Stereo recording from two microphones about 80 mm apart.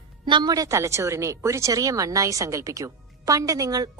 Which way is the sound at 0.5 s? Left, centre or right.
Right.